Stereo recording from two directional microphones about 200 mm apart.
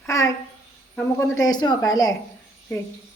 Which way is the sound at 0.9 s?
15° left (ahead or behind).